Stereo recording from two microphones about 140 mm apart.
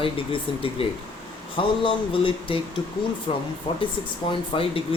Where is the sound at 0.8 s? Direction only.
40° left (ahead or behind).